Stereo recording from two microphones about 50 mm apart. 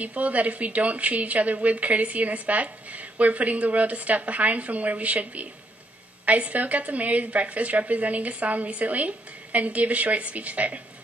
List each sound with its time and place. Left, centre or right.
0.0 s a woman's voice: right